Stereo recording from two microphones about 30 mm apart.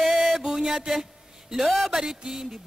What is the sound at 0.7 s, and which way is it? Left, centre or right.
Mantra, centre.